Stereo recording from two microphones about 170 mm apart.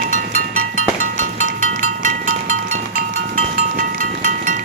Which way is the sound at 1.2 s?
50° right (ahead or behind).